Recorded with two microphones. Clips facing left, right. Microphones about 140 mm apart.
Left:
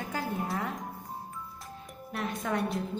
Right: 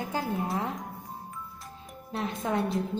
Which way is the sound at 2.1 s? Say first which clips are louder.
Right 2 dB; 25° right (ahead or behind).